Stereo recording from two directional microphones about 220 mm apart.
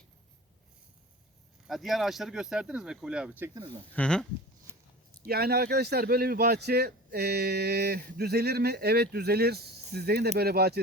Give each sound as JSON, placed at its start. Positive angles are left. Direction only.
{"t": 1.6, "sound": "speech", "side_deg": 0}
{"t": 3.9, "sound": "speech", "side_deg": 5}
{"t": 4.7, "sound": "a sound", "side_deg": -10}
{"t": 5.2, "sound": "speech", "side_deg": -45}